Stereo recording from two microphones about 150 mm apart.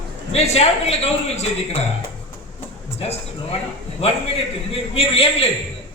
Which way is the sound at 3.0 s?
40° left (ahead or behind).